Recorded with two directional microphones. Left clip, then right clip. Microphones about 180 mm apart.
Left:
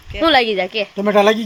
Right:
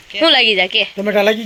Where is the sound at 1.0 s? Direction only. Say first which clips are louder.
Left 3 dB; 75° left (ahead or behind).